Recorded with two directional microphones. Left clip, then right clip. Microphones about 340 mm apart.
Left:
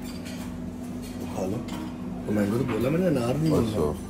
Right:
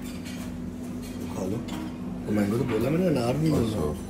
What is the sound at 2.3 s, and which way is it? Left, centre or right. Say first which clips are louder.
Speech: even; centre.